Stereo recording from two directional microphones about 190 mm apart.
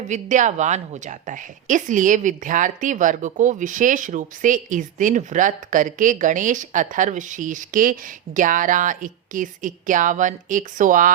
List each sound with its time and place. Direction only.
0.1 s a woman's voice: 40° right (ahead or behind)